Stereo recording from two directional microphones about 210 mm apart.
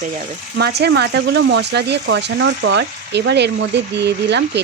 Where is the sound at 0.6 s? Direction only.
50° right (ahead or behind).